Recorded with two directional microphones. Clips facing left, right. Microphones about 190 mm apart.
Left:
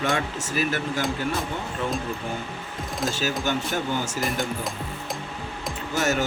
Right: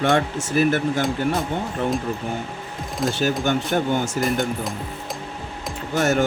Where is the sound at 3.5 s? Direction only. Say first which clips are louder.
Right 5 dB; 55° right (ahead or behind).